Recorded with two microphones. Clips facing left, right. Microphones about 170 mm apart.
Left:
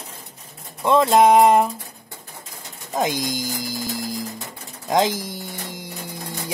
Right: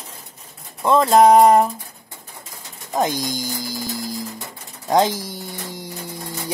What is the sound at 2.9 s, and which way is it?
Speech, centre (ahead or behind).